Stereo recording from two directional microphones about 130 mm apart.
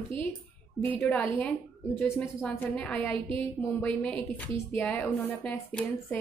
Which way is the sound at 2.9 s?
10° left (ahead or behind).